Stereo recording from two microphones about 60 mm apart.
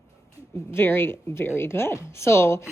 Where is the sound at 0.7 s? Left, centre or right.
Left.